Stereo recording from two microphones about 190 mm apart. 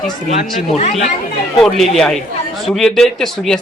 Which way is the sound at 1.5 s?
Centre (ahead or behind).